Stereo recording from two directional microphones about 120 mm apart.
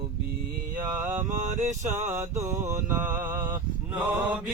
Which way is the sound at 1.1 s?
75° right (ahead or behind).